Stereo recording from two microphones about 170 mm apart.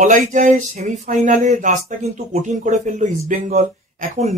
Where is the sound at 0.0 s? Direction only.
50° right (ahead or behind).